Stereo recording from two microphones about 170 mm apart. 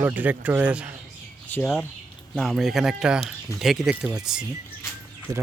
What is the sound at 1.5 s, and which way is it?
Speech, 10° left (ahead or behind).